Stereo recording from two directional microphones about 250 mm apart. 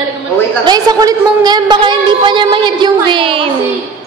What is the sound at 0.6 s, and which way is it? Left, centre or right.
A woman's voice, centre.